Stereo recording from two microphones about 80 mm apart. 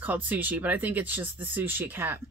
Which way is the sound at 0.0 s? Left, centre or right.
Right.